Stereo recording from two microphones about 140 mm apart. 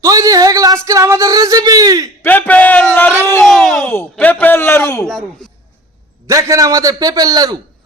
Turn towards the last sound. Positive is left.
turn(degrees=-25)  # may be behind; listen again after turning